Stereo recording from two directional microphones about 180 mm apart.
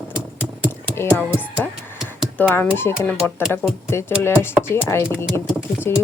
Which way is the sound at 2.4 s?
10° left (ahead or behind).